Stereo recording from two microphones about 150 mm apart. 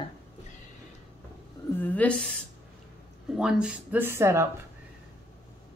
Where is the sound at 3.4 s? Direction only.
5° right (ahead or behind).